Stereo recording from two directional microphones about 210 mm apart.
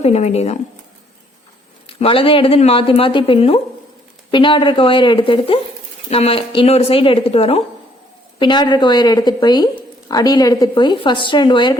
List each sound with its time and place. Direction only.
0.0 s speech: 30° left (ahead or behind)
1.9 s a woman's voice: 25° left (ahead or behind)